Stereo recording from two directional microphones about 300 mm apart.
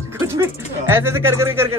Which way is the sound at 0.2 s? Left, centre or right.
Centre.